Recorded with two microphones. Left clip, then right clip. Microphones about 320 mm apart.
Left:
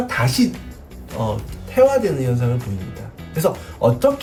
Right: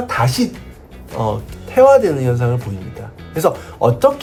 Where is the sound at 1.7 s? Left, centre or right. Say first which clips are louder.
Right 5 dB; centre.